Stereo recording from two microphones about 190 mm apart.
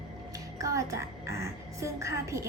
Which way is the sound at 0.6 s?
15° right (ahead or behind).